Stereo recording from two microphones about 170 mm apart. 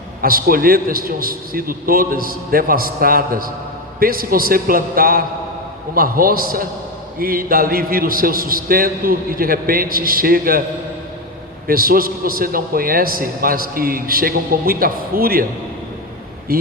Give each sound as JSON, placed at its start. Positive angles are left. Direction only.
{"t": 0.2, "sound": "a man's voice", "side_deg": -60}
{"t": 11.7, "sound": "a man's voice", "side_deg": -60}
{"t": 16.5, "sound": "a man's voice", "side_deg": -60}